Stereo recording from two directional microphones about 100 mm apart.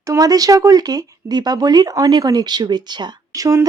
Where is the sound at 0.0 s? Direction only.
35° right (ahead or behind).